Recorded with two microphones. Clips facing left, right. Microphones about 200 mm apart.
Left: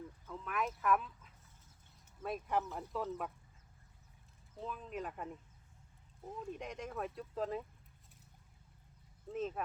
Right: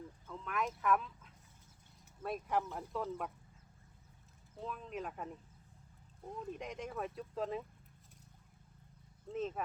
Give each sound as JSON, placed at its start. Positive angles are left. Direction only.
{"t": 0.3, "sound": "speech", "side_deg": 0}
{"t": 4.5, "sound": "speech", "side_deg": 0}
{"t": 9.3, "sound": "speech", "side_deg": 0}